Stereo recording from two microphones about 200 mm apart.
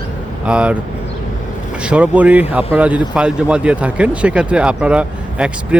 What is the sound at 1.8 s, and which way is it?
Speech, 5° right (ahead or behind).